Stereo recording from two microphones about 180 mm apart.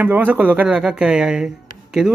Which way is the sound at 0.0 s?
10° right (ahead or behind).